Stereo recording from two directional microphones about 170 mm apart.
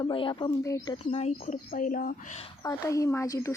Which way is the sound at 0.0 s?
30° left (ahead or behind).